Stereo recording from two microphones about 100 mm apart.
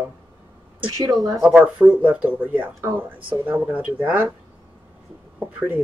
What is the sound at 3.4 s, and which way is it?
Speech, 15° right (ahead or behind).